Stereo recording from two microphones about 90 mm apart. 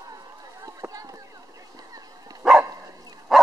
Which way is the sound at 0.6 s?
40° right (ahead or behind).